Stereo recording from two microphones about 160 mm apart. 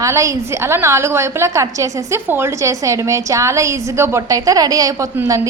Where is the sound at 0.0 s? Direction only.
20° right (ahead or behind).